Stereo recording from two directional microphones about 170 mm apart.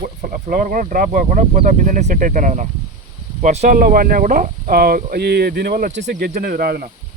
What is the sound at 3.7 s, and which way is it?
Speech, 55° right (ahead or behind).